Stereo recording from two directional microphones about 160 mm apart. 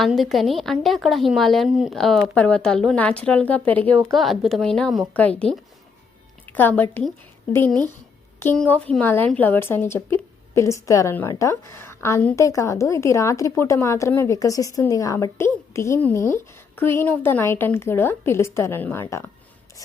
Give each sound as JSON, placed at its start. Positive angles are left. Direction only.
{"t": 0.0, "sound": "a woman's voice", "side_deg": 0}
{"t": 8.4, "sound": "speech", "side_deg": 10}